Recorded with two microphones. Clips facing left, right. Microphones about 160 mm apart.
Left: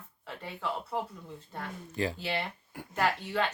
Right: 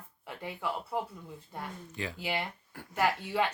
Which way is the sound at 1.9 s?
35° left (ahead or behind).